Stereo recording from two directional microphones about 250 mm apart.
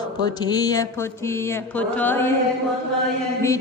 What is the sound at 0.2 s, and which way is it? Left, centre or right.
Mantra, centre.